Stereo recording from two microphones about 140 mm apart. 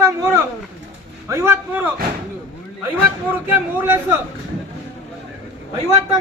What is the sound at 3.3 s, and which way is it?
Speech, 15° right (ahead or behind).